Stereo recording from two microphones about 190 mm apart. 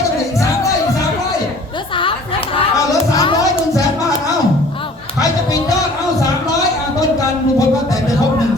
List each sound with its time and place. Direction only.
3.2 s music: 20° left (ahead or behind)